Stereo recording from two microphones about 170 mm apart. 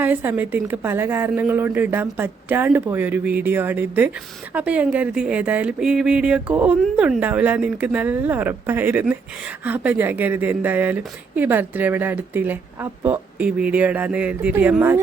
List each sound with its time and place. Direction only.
0.0 s speech: 10° right (ahead or behind)